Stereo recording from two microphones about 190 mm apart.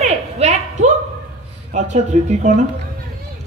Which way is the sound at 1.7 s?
40° right (ahead or behind).